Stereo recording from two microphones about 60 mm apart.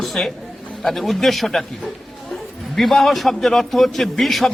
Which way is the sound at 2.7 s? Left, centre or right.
Centre.